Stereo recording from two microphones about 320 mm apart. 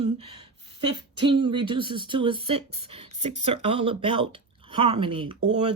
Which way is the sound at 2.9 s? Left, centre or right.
Centre.